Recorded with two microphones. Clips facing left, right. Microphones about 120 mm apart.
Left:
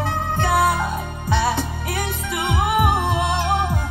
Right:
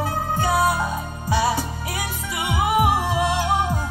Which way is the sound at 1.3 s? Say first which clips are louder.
Even; 10° right (ahead or behind).